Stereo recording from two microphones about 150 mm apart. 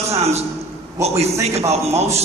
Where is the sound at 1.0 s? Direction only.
45° right (ahead or behind).